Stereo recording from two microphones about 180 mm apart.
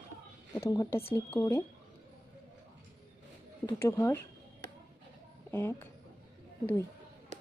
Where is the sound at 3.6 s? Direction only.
15° left (ahead or behind).